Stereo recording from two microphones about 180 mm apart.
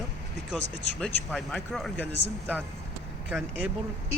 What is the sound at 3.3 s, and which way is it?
Speech, 5° right (ahead or behind).